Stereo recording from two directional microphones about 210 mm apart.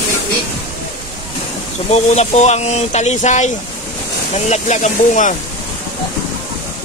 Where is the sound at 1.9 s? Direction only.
30° left (ahead or behind).